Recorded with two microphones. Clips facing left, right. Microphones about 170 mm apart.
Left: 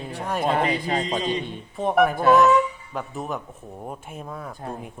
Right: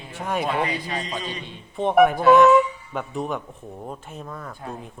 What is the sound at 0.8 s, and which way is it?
Speech, 25° left (ahead or behind).